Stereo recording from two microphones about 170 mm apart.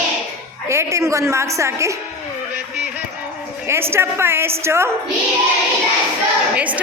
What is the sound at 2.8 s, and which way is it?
Music, 10° right (ahead or behind).